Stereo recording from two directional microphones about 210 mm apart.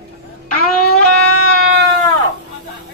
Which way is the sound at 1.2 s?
90° left.